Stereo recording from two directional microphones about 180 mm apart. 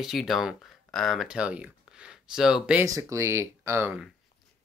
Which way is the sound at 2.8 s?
20° right (ahead or behind).